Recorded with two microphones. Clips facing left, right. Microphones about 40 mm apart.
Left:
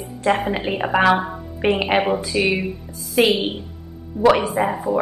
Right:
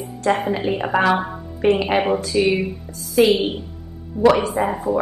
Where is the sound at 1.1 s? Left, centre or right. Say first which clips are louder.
Left 1 dB; centre.